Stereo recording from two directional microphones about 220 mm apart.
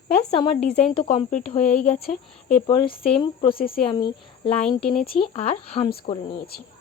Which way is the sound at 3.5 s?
40° left (ahead or behind).